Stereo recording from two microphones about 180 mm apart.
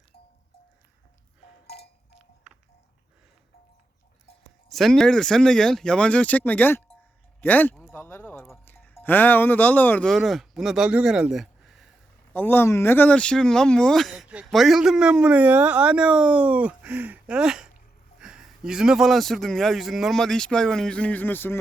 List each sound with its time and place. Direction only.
1.6 s a sound: 65° left (ahead or behind)
2.1 s music: 5° right (ahead or behind)
4.7 s speech: centre (ahead or behind)
7.4 s a sound: 10° left (ahead or behind)
8.6 s speech: 10° left (ahead or behind)
12.3 s speech: 10° left (ahead or behind)